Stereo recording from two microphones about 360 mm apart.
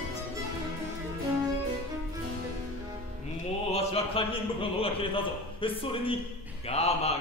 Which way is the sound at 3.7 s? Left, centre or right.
Centre.